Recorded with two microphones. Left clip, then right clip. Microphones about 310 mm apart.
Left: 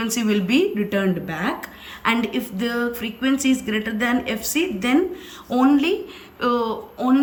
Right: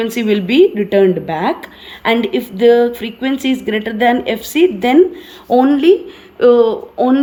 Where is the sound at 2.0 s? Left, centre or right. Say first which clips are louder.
Right 7 dB; centre.